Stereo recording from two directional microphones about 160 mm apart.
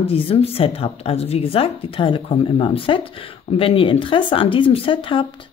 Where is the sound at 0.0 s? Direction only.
35° left (ahead or behind).